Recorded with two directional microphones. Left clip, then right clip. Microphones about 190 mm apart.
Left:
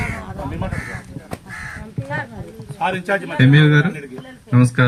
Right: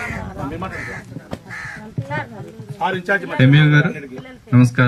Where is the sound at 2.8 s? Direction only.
30° left (ahead or behind).